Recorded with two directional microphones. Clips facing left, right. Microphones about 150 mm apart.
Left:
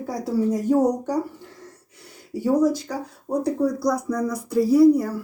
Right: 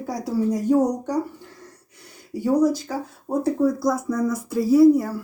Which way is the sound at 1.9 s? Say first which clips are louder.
Even; centre (ahead or behind).